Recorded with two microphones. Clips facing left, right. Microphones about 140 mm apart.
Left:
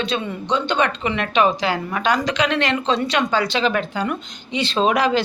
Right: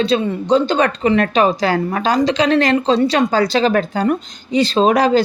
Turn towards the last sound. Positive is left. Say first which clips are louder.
# right 5 dB
turn(degrees=-40)  # may be behind; listen again after turning